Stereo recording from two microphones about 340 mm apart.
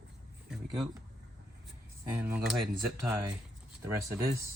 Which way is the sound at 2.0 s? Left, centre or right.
Centre.